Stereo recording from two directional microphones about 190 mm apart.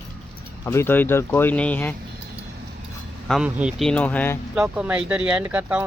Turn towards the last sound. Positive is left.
turn(degrees=-10)  # may be behind; listen again after turning